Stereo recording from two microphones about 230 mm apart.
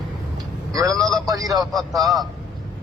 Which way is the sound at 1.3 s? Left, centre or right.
Centre.